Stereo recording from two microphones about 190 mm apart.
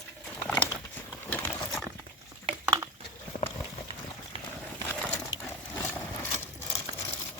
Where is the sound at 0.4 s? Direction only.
5° left (ahead or behind).